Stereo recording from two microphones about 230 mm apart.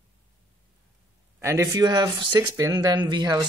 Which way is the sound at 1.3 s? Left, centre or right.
Centre.